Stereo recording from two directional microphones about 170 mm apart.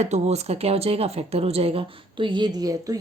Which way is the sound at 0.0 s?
40° right (ahead or behind).